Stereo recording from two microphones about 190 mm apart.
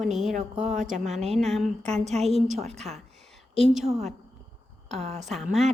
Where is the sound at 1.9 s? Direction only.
35° right (ahead or behind).